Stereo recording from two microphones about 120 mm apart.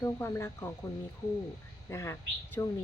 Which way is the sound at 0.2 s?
20° left (ahead or behind).